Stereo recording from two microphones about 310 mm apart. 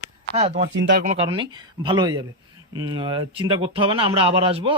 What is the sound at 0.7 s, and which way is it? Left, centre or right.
Speech, right.